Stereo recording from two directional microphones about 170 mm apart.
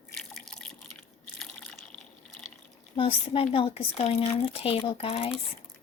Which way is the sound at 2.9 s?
30° left (ahead or behind).